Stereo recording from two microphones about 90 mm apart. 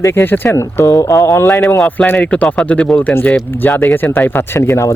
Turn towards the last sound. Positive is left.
turn(degrees=35)  # may be behind; listen again after turning